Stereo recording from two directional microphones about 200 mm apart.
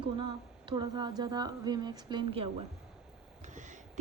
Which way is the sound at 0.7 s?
20° right (ahead or behind).